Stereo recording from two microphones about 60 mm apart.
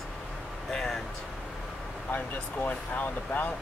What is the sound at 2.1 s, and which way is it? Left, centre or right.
Speech, left.